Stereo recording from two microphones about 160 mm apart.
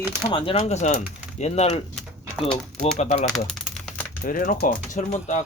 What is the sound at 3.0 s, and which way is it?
Speech, 45° left (ahead or behind).